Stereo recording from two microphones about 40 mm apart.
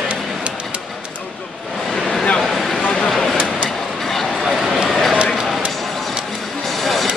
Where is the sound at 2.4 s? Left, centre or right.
Centre.